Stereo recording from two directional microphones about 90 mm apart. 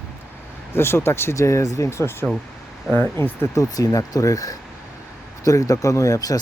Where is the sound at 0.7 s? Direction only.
25° left (ahead or behind).